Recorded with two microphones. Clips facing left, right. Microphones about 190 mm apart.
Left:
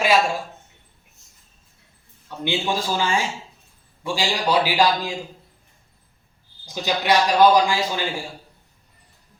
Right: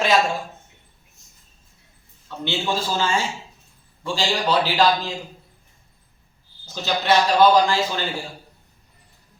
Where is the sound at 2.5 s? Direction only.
15° left (ahead or behind).